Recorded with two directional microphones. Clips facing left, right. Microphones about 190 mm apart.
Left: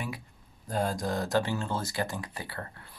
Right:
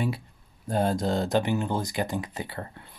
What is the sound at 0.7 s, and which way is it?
Speech, 25° right (ahead or behind).